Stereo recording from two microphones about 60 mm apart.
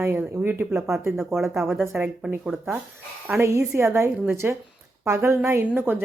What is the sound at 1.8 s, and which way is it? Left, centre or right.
Speech, right.